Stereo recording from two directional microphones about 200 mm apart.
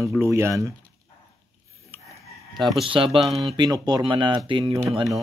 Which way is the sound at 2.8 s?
25° right (ahead or behind).